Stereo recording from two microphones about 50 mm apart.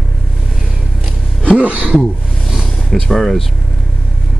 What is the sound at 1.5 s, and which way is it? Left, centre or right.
Speech, right.